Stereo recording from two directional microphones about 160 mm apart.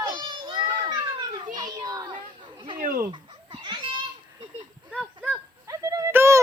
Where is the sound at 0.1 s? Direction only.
30° right (ahead or behind).